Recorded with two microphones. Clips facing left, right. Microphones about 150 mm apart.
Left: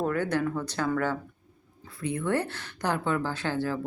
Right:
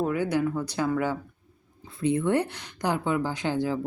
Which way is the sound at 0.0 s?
10° right (ahead or behind).